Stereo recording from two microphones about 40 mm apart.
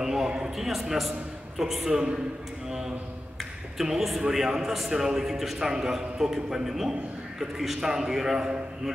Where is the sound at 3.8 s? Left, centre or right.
Centre.